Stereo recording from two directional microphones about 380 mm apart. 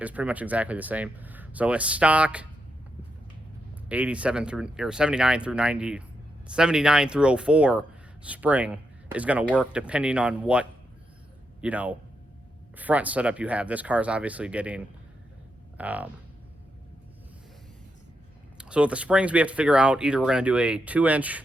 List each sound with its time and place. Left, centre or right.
0.0 s speech: centre
3.8 s speech: centre
18.5 s speech: centre